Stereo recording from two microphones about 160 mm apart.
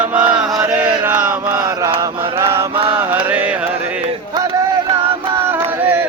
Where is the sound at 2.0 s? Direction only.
30° right (ahead or behind).